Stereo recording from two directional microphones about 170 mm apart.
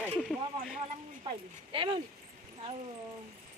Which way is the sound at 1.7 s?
30° right (ahead or behind).